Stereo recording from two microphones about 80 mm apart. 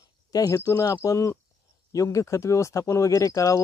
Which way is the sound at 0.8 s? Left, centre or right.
Left.